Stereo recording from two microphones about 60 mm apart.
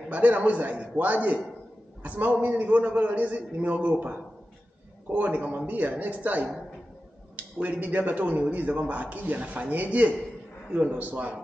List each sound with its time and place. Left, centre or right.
0.1 s a man's voice: right
7.6 s a man's voice: right